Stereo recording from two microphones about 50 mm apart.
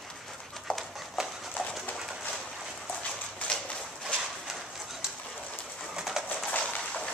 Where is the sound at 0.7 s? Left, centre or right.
Left.